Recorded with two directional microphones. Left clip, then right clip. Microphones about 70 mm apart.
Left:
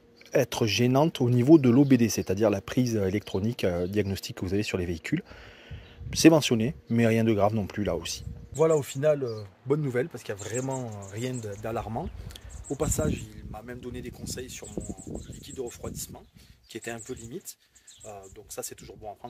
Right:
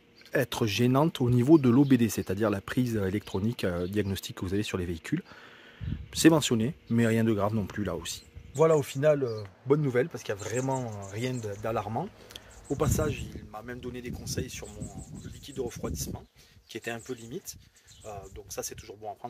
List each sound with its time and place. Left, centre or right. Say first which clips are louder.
0.3 s speech: left 3 dB; centre
8.5 s speech: even; left
9.2 s speech: right 1 dB; left
10.6 s speech: right 2 dB; left
11.1 s speech: even; left